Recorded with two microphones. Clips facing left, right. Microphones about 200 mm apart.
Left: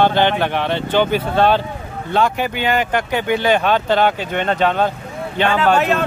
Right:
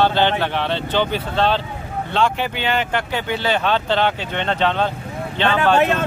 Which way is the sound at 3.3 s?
15° left (ahead or behind).